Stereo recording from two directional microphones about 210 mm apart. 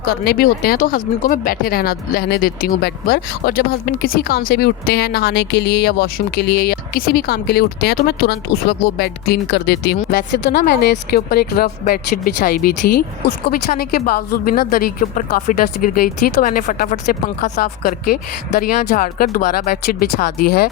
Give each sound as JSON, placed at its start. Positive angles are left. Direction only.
{"t": 0.0, "sound": "speech", "side_deg": 45}